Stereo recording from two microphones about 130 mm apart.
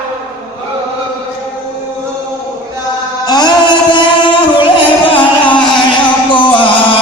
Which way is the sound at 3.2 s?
30° left (ahead or behind).